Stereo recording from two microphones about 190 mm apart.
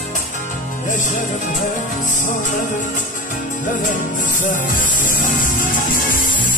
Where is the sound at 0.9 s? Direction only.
40° left (ahead or behind).